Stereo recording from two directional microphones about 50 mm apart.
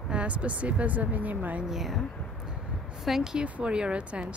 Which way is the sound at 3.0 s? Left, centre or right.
Centre.